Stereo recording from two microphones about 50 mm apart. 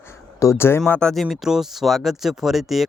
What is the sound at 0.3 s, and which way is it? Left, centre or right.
Speech, left.